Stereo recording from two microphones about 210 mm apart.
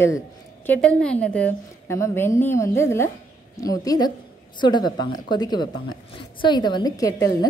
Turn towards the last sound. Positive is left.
turn(degrees=15)  # may be behind; listen again after turning